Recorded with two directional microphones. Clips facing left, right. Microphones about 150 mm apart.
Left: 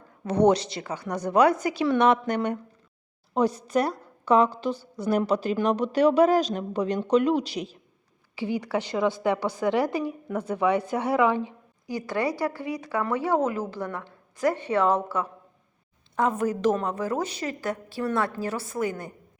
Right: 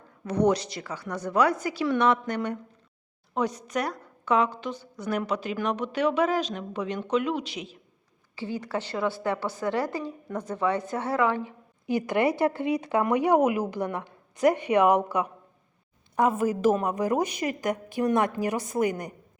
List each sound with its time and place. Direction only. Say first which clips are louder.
0.3 s a woman's voice: left 3 dB; 25° left (ahead or behind)
3.3 s a woman's voice: left 5 dB; 30° left (ahead or behind)
8.4 s a woman's voice: left 4 dB; 15° left (ahead or behind)
11.9 s speech: right 3 dB; 20° right (ahead or behind)